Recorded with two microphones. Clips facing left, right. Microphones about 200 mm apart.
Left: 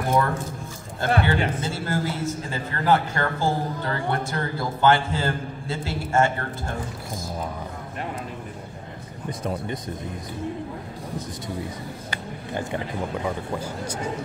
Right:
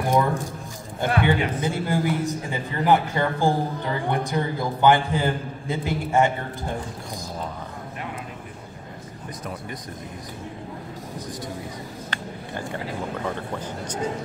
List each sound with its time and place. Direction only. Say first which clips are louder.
0.1 s a sound: right 1 dB; 15° right (ahead or behind)
1.2 s a man's voice: right 2 dB; 15° right (ahead or behind)
9.4 s speech: left 6 dB; 30° left (ahead or behind)